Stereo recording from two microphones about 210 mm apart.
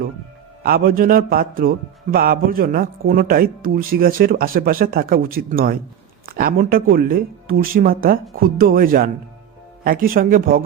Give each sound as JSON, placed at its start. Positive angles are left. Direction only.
{"t": 0.6, "sound": "speech", "side_deg": -45}